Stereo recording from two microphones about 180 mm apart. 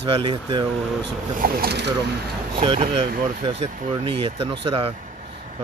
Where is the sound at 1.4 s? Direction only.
60° right (ahead or behind).